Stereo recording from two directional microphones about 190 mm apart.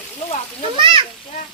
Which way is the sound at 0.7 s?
25° right (ahead or behind).